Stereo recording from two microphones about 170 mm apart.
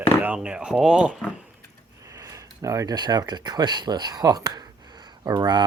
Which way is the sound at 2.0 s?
20° right (ahead or behind).